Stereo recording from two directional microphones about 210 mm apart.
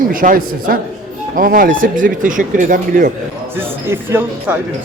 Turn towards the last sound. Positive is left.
turn(degrees=-10)  # may be behind; listen again after turning